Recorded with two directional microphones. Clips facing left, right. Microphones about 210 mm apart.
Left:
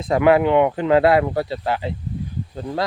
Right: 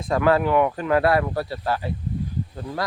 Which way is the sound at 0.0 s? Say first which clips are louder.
Left 4 dB; 20° left (ahead or behind).